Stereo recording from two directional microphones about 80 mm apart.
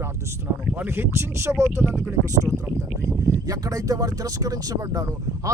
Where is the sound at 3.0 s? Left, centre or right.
Right.